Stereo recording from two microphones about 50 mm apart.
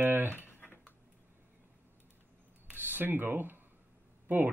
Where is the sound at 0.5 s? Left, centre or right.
Left.